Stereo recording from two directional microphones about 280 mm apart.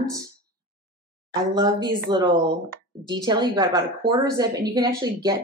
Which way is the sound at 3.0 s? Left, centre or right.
Centre.